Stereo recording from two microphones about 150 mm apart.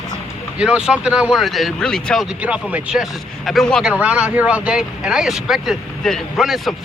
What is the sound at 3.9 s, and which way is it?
Speech, 10° right (ahead or behind).